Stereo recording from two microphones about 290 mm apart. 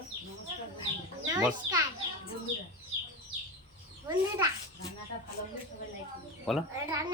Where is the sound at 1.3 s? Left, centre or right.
Centre.